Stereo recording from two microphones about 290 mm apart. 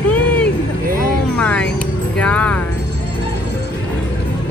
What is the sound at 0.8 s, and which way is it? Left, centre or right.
Vehicle, right.